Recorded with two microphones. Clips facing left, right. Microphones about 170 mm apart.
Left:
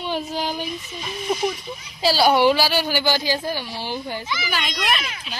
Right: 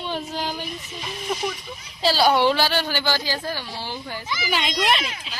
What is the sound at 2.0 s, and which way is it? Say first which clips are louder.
A woman's voice: left 2 dB; 10° left (ahead or behind).